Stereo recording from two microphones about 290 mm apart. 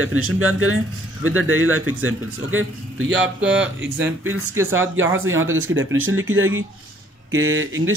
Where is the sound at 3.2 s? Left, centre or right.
Centre.